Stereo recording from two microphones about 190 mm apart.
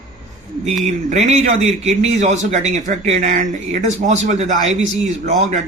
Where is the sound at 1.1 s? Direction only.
35° right (ahead or behind).